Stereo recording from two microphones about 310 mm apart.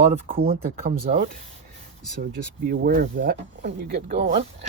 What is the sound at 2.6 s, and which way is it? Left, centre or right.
Speech, right.